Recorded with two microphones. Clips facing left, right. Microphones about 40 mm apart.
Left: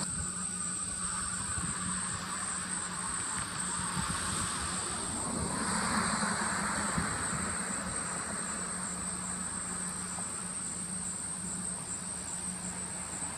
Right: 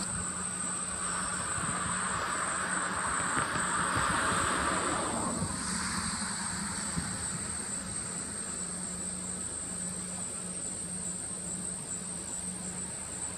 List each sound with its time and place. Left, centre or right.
1.0 s vehicle: right
2.1 s vehicle: centre
2.4 s vehicle: right
3.0 s music: right
3.6 s vehicle: right
5.5 s vehicle: centre